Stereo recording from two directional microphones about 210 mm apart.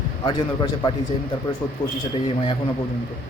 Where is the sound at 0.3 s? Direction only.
20° left (ahead or behind).